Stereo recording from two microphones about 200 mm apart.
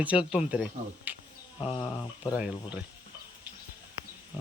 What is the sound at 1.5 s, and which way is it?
Speech, 25° left (ahead or behind).